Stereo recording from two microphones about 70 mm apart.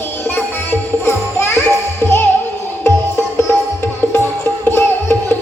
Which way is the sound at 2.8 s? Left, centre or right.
Left.